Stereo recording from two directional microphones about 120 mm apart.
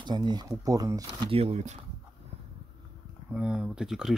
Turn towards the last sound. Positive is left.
turn(degrees=-5)  # may be behind; listen again after turning